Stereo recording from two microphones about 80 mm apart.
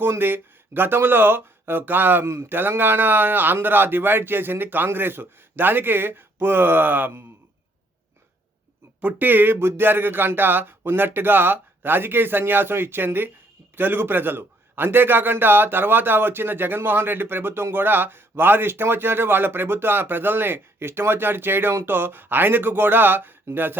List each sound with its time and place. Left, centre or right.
0.0 s a man's voice: right
9.0 s a man's voice: right